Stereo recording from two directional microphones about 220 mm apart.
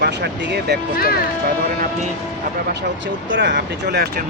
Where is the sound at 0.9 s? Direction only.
45° left (ahead or behind).